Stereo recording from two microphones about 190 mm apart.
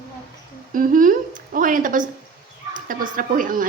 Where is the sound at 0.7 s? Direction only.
45° right (ahead or behind).